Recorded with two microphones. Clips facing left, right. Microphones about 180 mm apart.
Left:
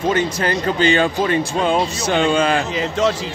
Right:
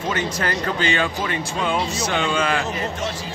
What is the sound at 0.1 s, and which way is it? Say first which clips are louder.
Speech: left 3 dB; 25° left (ahead or behind).